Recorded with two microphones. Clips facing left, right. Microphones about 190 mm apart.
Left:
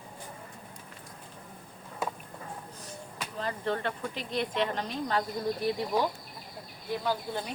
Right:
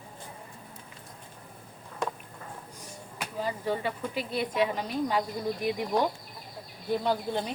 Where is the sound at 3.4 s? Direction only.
10° right (ahead or behind).